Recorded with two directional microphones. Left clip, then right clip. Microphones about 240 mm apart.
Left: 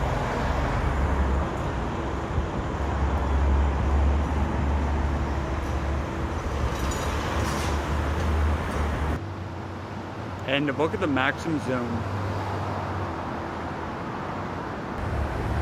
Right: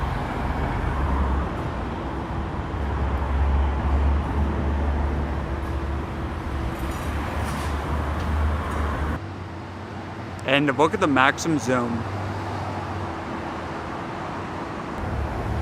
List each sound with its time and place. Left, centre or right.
10.5 s speech: right